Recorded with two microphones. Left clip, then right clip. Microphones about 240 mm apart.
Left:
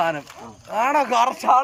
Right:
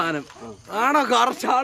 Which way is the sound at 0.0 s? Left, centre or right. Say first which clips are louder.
Left 2 dB; centre.